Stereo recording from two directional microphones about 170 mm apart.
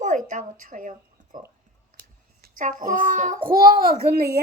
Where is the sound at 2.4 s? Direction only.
50° right (ahead or behind).